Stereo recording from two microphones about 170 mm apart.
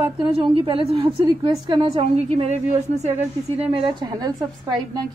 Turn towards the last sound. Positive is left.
turn(degrees=-25)  # may be behind; listen again after turning